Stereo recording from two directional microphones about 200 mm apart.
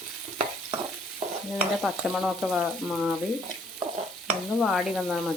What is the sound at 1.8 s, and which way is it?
Frying, centre (ahead or behind).